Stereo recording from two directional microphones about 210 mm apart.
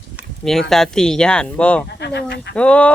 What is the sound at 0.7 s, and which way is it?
Speech, centre (ahead or behind).